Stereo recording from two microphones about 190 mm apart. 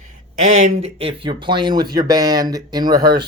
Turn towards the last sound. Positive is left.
turn(degrees=-20)  # may be behind; listen again after turning